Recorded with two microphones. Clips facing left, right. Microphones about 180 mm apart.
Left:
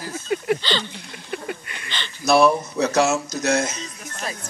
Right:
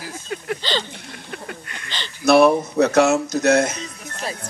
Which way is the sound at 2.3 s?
60° right (ahead or behind).